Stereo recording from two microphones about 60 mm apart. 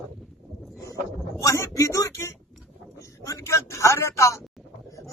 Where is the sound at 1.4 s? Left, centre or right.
Left.